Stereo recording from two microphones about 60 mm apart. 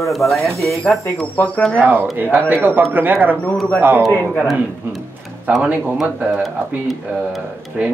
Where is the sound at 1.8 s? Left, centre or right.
Right.